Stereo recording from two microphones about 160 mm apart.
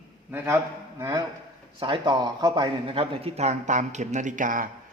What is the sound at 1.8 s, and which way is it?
A man's voice, 30° right (ahead or behind).